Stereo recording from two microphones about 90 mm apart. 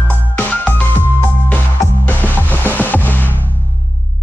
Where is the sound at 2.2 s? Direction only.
20° left (ahead or behind).